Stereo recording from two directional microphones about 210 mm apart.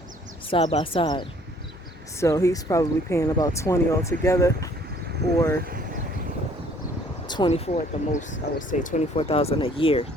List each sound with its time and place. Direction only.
0.5 s speech: 25° left (ahead or behind)
7.3 s speech: 20° left (ahead or behind)